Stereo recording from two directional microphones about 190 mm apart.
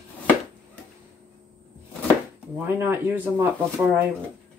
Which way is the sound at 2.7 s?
10° right (ahead or behind).